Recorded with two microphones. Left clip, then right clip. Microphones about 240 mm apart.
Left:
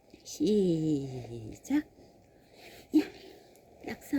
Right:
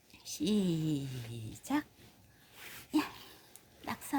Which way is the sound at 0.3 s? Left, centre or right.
Centre.